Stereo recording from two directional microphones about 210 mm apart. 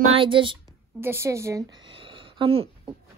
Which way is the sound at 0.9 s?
10° right (ahead or behind).